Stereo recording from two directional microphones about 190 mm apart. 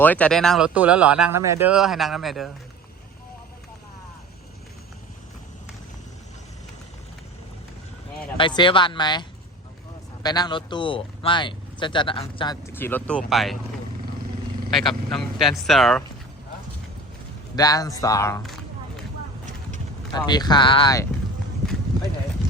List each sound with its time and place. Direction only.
0.0 s speech: 10° left (ahead or behind)
8.4 s speech: 25° left (ahead or behind)
10.2 s speech: 20° left (ahead or behind)
12.6 s speech: 10° left (ahead or behind)
14.7 s speech: centre (ahead or behind)
17.5 s speech: 20° left (ahead or behind)
20.1 s speech: 20° left (ahead or behind)